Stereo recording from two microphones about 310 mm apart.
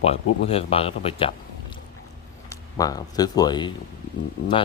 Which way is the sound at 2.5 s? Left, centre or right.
Centre.